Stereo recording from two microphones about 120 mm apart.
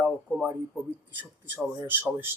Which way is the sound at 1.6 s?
15° right (ahead or behind).